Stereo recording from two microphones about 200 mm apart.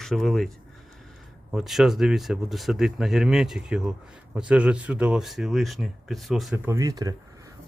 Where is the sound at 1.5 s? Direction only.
Centre (ahead or behind).